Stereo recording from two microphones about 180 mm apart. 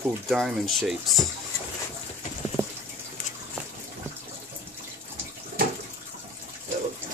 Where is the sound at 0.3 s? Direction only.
Centre (ahead or behind).